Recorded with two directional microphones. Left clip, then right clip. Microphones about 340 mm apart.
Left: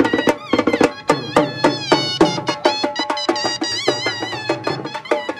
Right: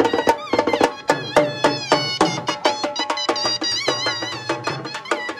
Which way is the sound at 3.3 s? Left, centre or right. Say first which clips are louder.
Left 1 dB; centre.